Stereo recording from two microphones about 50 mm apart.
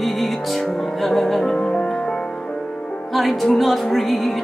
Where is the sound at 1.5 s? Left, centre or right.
Centre.